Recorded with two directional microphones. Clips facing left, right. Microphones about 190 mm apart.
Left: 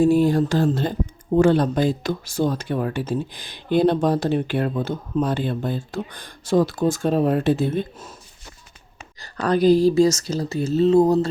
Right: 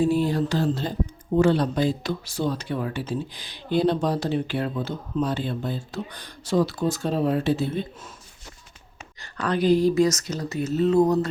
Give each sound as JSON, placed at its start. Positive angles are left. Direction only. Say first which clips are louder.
{"t": 0.0, "sound": "speech", "louder": "left 5 dB", "side_deg": 45}
{"t": 9.2, "sound": "speech", "louder": "left 5 dB", "side_deg": 40}